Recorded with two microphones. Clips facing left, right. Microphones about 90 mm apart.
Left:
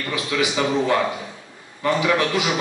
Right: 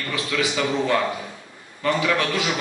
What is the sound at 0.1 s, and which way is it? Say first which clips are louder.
A man's voice: left 2 dB; 20° left (ahead or behind).